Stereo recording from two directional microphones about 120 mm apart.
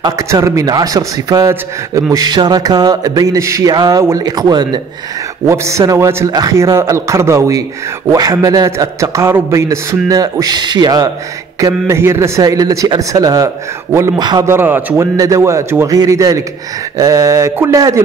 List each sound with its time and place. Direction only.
0.0 s speech: 25° right (ahead or behind)
5.5 s a man's voice: 25° right (ahead or behind)
11.6 s a man's voice: 25° right (ahead or behind)
15.1 s a man's voice: 25° right (ahead or behind)